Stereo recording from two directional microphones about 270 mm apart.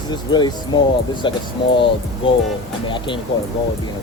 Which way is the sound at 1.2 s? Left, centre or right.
Centre.